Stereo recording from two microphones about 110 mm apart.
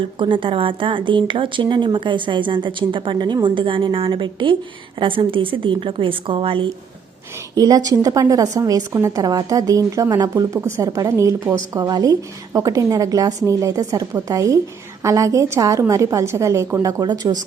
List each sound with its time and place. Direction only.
0.2 s a woman's voice: 50° right (ahead or behind)
7.5 s a woman's voice: 35° right (ahead or behind)